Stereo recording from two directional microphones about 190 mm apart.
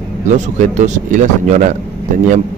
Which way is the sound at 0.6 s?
40° right (ahead or behind).